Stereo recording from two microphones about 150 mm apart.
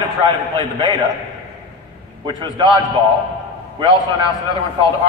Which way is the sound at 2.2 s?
30° right (ahead or behind).